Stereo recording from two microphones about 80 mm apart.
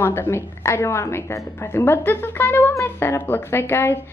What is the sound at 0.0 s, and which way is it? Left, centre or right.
A woman's voice, left.